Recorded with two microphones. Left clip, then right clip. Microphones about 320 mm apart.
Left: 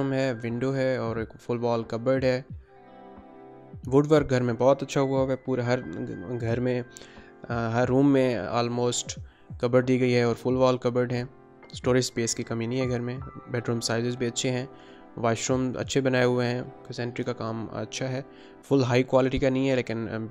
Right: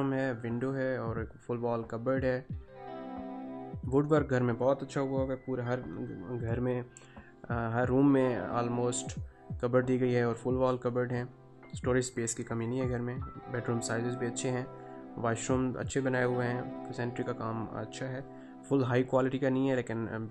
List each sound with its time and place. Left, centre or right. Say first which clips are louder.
0.0 s speech: left 5 dB; centre
3.9 s speech: left 7 dB; centre